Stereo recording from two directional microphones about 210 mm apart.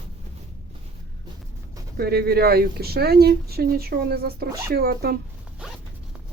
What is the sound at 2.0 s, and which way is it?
Speech, 50° right (ahead or behind).